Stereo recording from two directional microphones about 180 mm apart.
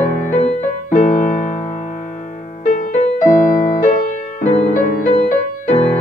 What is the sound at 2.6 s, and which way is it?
Music, 45° left (ahead or behind).